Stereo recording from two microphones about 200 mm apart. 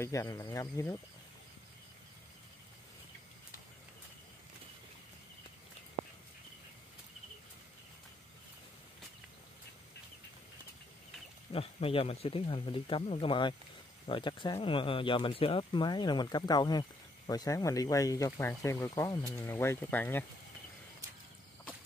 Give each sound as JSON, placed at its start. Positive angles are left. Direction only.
{"t": 0.0, "sound": "speech", "side_deg": 15}
{"t": 11.5, "sound": "speech", "side_deg": 30}